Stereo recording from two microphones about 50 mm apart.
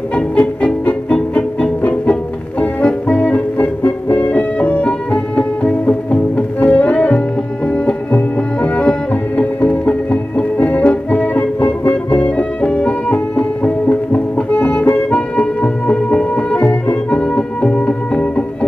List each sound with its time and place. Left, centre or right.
0.1 s music: left